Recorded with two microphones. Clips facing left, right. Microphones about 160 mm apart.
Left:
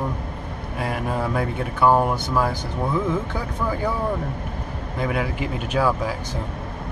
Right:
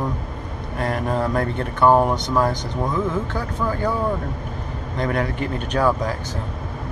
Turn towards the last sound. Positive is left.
turn(degrees=10)  # may be behind; listen again after turning